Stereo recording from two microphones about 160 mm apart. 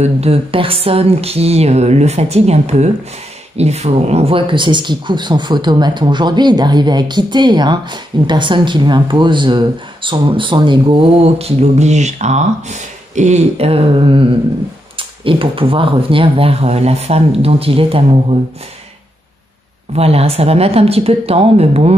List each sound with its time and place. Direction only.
0.0 s speech: 40° right (ahead or behind)
19.9 s speech: 40° right (ahead or behind)